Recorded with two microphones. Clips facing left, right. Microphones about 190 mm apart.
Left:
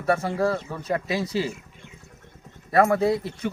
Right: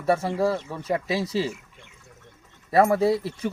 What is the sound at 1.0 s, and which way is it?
Speech, 30° right (ahead or behind).